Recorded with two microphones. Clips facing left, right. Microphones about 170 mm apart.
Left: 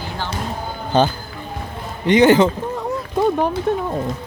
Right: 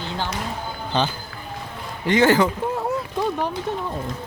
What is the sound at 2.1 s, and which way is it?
Speech, 20° left (ahead or behind).